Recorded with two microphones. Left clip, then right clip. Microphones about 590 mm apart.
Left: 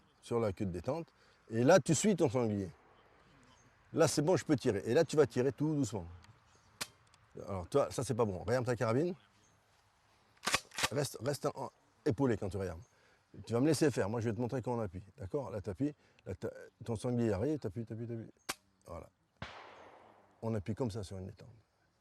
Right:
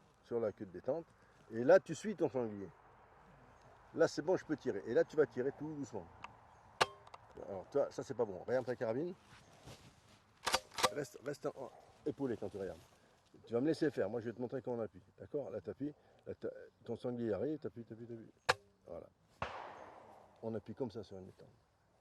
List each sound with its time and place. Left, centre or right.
0.3 s speech: left
3.9 s speech: left
7.5 s speech: left
10.9 s speech: left
20.4 s speech: left